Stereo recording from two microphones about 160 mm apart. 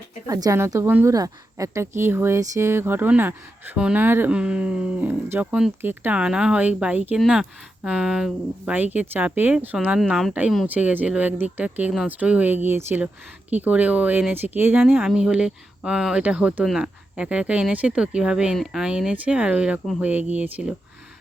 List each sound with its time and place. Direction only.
0.3 s a woman's voice: 20° right (ahead or behind)